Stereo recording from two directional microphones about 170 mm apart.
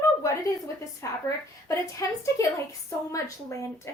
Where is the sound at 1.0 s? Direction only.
20° left (ahead or behind).